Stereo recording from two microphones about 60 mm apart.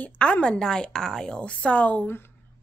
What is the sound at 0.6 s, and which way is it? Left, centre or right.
A woman's voice, centre.